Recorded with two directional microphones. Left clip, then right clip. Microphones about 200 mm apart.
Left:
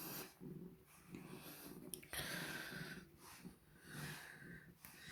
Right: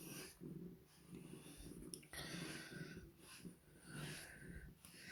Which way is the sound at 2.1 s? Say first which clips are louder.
Left 5 dB; 30° left (ahead or behind).